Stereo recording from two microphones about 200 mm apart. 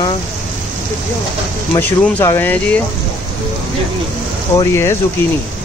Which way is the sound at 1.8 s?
10° left (ahead or behind).